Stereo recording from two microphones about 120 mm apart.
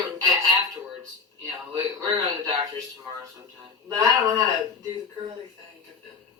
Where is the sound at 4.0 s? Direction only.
25° right (ahead or behind).